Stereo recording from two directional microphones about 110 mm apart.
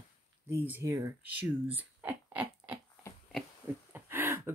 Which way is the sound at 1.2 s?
15° right (ahead or behind).